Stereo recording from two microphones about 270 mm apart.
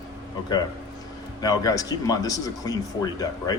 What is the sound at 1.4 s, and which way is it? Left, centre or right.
Speech, centre.